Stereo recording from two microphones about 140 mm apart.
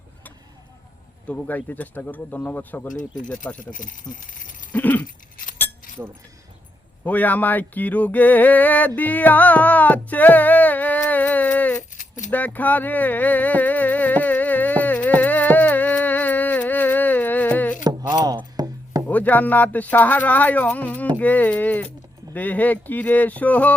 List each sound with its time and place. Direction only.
1.3 s speech: 10° left (ahead or behind)
2.9 s speech: 65° left (ahead or behind)
3.2 s speech: 5° left (ahead or behind)
3.6 s speech: 70° left (ahead or behind)
4.7 s a sound: 10° left (ahead or behind)
7.0 s speech: 10° left (ahead or behind)
9.0 s music: 10° left (ahead or behind)
11.9 s keys jangling: 65° left (ahead or behind)
12.3 s music: 10° left (ahead or behind)
17.8 s chopping: 30° right (ahead or behind)
19.0 s speech: 10° left (ahead or behind)